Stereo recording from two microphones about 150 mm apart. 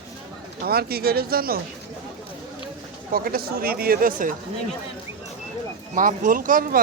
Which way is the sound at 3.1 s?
75° right (ahead or behind).